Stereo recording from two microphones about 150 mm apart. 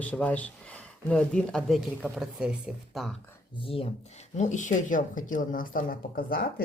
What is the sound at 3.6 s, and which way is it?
Speech, 40° left (ahead or behind).